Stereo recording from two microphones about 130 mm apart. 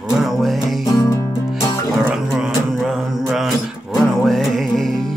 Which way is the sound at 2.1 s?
5° right (ahead or behind).